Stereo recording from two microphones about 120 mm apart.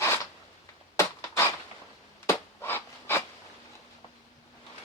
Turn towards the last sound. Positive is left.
turn(degrees=20)  # may be behind; listen again after turning